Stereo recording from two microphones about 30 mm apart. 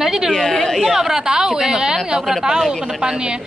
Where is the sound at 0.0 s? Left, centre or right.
Centre.